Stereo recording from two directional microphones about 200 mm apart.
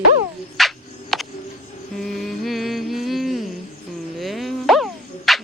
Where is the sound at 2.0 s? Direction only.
Centre (ahead or behind).